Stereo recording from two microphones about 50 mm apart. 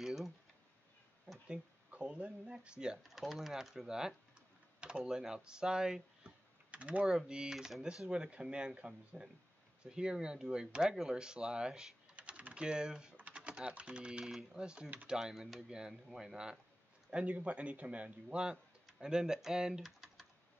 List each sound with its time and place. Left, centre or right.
0.0 s a sound: centre
1.5 s speech: right
3.0 s speech: centre
6.7 s typing: right
7.1 s speech: centre
8.1 s speech: right
12.2 s typing: right
13.1 s typing: right
14.2 s speech: centre
14.6 s speech: centre
17.1 s speech: right
18.9 s speech: centre